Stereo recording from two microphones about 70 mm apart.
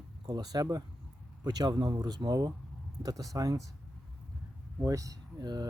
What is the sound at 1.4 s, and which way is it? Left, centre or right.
Speech, right.